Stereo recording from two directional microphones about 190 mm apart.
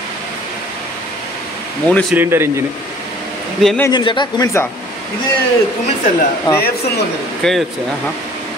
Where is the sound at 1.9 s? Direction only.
5° left (ahead or behind).